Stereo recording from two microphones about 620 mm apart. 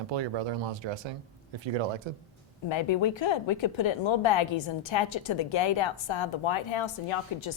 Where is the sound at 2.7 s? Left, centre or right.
Left.